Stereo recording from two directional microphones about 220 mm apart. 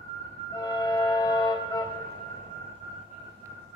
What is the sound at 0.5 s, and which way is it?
Music, 15° left (ahead or behind).